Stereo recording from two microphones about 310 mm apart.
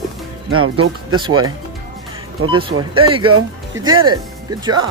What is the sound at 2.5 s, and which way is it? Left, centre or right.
Speech, centre.